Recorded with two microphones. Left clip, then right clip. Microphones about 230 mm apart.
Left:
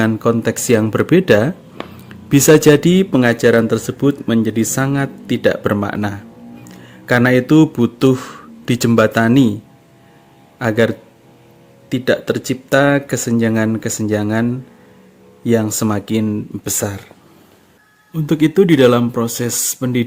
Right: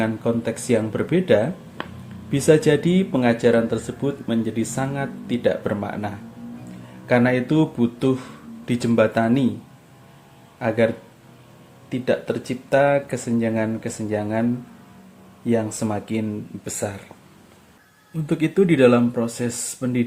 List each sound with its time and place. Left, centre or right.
0.0 s speech: left
10.6 s speech: left
15.4 s speech: left
18.3 s speech: left